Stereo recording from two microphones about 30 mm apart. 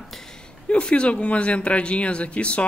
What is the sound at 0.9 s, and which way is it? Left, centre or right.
Speech, left.